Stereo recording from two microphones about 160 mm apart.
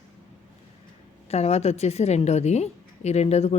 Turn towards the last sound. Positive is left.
turn(degrees=40)  # may be behind; listen again after turning